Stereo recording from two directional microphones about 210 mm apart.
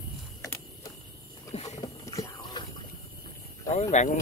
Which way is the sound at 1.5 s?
30° left (ahead or behind).